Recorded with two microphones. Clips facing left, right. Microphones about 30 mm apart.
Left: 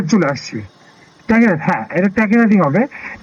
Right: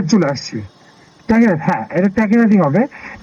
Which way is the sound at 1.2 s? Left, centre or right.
Centre.